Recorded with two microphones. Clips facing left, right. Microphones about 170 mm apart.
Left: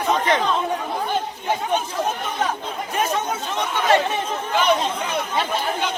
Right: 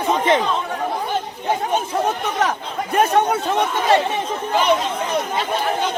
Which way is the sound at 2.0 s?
80° right.